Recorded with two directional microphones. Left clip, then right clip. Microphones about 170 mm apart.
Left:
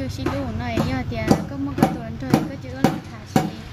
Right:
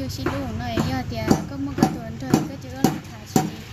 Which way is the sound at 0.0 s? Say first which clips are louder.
Left 1 dB; 10° left (ahead or behind).